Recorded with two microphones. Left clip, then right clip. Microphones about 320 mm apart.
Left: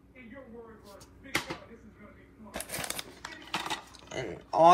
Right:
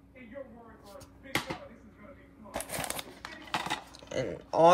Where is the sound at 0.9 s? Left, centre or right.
Right.